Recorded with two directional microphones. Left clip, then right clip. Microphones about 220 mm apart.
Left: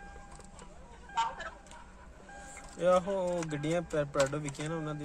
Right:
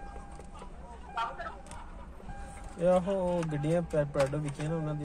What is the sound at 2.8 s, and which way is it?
Speech, 40° left (ahead or behind).